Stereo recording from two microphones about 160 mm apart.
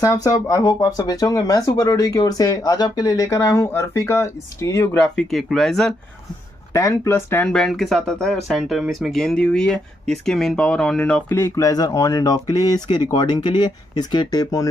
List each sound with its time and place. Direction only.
0.0 s speech: 20° left (ahead or behind)
5.1 s speech: 5° left (ahead or behind)
6.7 s speech: 20° left (ahead or behind)